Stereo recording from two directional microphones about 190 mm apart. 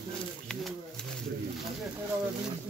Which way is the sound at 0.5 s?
5° left (ahead or behind).